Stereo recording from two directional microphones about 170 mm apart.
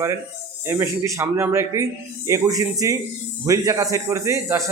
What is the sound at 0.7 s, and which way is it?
Speech, 15° right (ahead or behind).